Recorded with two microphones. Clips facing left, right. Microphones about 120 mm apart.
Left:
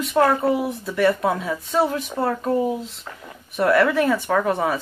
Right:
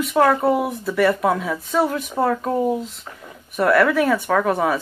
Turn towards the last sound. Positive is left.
turn(degrees=0)  # may be behind; listen again after turning